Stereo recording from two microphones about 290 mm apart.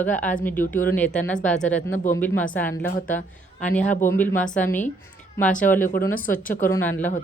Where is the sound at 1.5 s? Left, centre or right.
Left.